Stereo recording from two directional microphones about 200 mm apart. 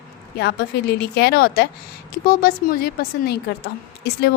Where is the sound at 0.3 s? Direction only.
55° left (ahead or behind).